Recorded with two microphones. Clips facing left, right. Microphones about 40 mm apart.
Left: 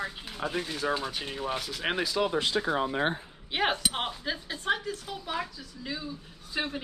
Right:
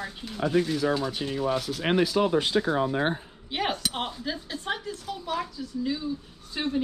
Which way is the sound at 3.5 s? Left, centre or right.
Centre.